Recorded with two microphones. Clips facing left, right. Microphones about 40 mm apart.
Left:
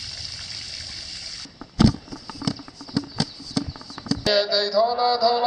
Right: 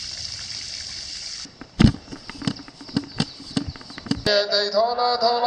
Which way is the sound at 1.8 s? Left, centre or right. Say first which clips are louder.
Right 1 dB; right.